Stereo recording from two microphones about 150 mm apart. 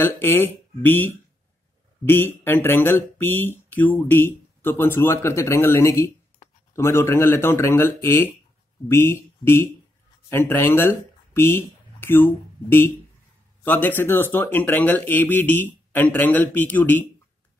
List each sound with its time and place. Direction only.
0.0 s speech: 15° left (ahead or behind)